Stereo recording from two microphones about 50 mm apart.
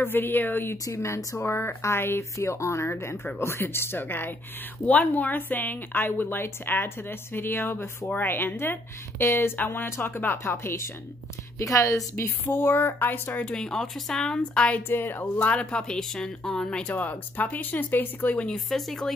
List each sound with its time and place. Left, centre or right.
0.0 s a woman's voice: left
1.1 s speech: left
2.3 s speech: left
2.9 s a woman's voice: left
9.2 s speech: left
11.5 s a woman's voice: left
12.4 s a woman's voice: left
13.5 s speech: centre
14.9 s a woman's voice: left
15.3 s speech: left
16.8 s speech: left
18.5 s speech: centre